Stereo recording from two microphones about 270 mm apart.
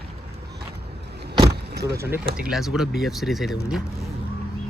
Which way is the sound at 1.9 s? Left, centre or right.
Centre.